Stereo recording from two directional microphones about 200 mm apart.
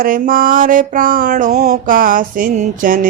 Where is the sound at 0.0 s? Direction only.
45° right (ahead or behind).